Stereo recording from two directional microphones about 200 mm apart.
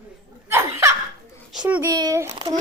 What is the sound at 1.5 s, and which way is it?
Speech, 5° right (ahead or behind).